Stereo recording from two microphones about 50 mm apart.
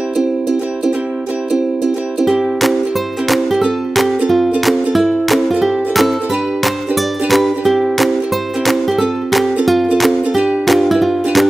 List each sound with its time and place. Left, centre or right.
0.2 s music: centre
2.1 s music: centre
7.2 s music: centre
10.7 s music: centre